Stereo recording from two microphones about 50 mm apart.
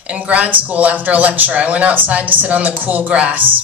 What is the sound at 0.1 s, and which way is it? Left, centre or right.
A man's voice, right.